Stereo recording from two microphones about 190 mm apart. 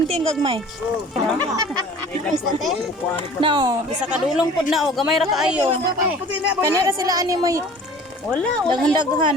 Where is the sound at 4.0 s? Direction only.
5° right (ahead or behind).